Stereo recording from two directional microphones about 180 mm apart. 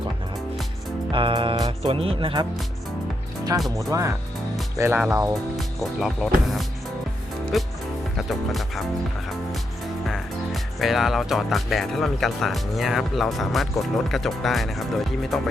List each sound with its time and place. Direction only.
1.1 s music: 30° right (ahead or behind)
1.8 s speech: 35° right (ahead or behind)
3.8 s speech: 15° right (ahead or behind)
5.5 s speech: centre (ahead or behind)
7.5 s speech: centre (ahead or behind)
10.1 s speech: centre (ahead or behind)